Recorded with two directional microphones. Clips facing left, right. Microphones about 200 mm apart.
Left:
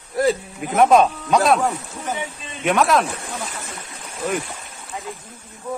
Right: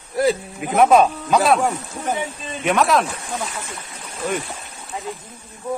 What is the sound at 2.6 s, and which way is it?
Speech, centre (ahead or behind).